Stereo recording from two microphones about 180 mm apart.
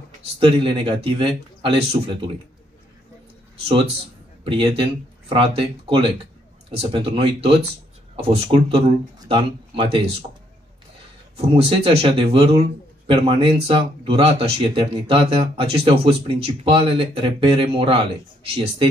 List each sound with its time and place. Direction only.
0.2 s a man's voice: 30° right (ahead or behind)
4.5 s a man's voice: 30° right (ahead or behind)
11.5 s speech: 30° right (ahead or behind)